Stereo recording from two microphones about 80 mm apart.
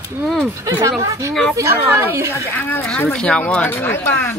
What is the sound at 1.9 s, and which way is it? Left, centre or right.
Speech, right.